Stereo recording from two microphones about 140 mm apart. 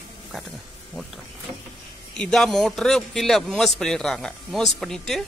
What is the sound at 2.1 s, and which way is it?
A man's voice, 5° left (ahead or behind).